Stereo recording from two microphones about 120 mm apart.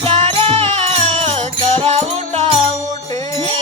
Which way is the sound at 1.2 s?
55° right (ahead or behind).